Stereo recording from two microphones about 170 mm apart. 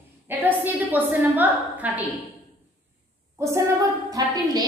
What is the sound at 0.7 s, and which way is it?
A woman's voice, 10° right (ahead or behind).